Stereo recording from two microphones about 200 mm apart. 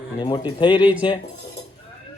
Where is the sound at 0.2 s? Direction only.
20° left (ahead or behind).